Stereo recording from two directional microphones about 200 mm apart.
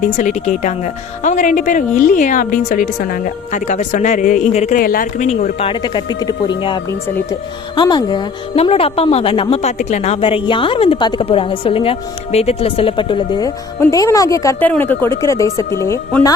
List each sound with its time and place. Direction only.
0.2 s a woman's voice: 35° left (ahead or behind); by 16.3 s 15° left (ahead or behind)